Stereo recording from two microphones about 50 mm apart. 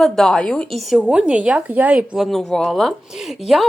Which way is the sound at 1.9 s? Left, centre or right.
Centre.